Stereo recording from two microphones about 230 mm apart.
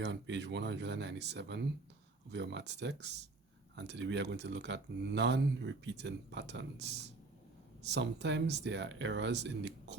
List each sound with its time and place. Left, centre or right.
0.0 s speech: right